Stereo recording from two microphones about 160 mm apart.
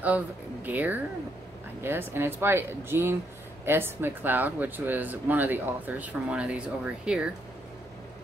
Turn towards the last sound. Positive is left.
turn(degrees=-5)  # may be behind; listen again after turning